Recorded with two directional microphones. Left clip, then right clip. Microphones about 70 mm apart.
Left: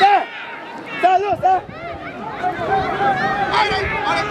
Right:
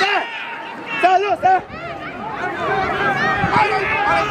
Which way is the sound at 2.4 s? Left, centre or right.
Centre.